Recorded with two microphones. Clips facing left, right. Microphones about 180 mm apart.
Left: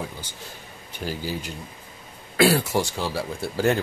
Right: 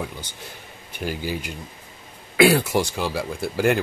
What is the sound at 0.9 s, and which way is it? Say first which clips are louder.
Speech: right 2 dB; 10° right (ahead or behind).